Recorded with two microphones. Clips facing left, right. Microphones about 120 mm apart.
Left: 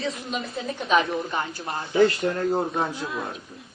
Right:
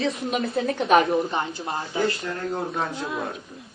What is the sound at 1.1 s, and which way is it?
Speech, 25° right (ahead or behind).